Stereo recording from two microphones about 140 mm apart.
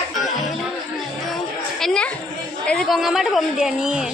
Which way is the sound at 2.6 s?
5° left (ahead or behind).